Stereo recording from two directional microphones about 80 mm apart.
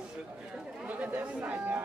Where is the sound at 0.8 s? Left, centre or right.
Centre.